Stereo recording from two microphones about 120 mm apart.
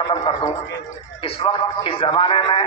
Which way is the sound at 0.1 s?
45° left (ahead or behind).